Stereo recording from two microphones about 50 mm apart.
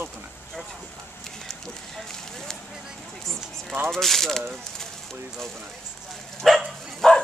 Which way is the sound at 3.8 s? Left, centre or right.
Centre.